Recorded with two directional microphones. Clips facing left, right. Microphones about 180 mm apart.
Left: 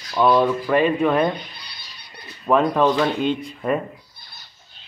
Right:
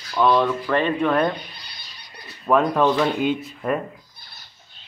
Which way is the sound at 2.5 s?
Centre (ahead or behind).